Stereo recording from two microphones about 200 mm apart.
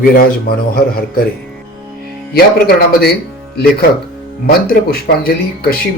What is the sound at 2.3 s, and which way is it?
Speech, 50° left (ahead or behind).